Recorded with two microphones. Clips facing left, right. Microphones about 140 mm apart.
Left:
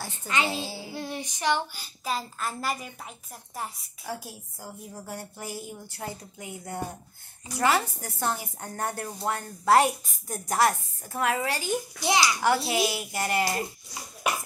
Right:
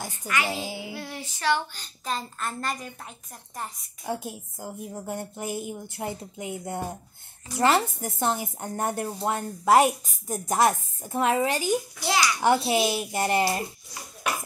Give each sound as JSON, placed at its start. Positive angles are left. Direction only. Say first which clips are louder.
{"t": 0.5, "sound": "a child's voice", "louder": "right 1 dB", "side_deg": -15}
{"t": 0.9, "sound": "speech", "louder": "left 2 dB", "side_deg": 20}
{"t": 4.0, "sound": "a woman's voice", "louder": "right 5 dB", "side_deg": -20}
{"t": 12.0, "sound": "speech", "louder": "left 5 dB", "side_deg": 15}
{"t": 12.4, "sound": "a woman's voice", "louder": "right 2 dB", "side_deg": -25}